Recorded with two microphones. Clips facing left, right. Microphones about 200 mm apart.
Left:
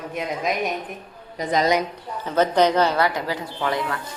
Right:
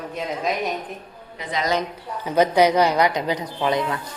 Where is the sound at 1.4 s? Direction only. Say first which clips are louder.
Left 6 dB; 40° left (ahead or behind).